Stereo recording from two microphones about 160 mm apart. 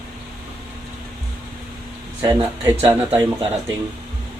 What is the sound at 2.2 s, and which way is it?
Speech, 15° right (ahead or behind).